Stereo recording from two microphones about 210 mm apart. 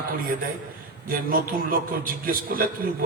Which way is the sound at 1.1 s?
40° right (ahead or behind).